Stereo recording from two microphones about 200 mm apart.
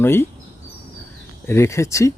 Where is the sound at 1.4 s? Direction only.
15° left (ahead or behind).